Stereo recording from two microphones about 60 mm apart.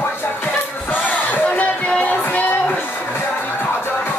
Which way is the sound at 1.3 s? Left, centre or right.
Left.